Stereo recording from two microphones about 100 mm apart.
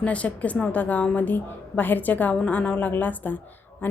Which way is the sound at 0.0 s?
15° left (ahead or behind).